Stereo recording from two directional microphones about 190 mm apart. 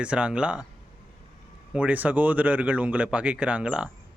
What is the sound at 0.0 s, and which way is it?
Speech, 5° right (ahead or behind).